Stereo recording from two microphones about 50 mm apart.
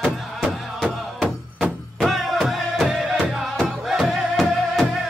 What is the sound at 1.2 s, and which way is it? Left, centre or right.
Music, right.